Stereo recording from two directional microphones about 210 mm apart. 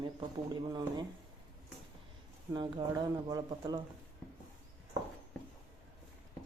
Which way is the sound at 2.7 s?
20° right (ahead or behind).